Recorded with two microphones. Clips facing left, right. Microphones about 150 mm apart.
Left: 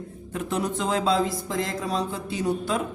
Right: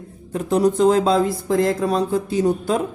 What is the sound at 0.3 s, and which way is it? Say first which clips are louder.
Speech: right 10 dB; 40° right (ahead or behind).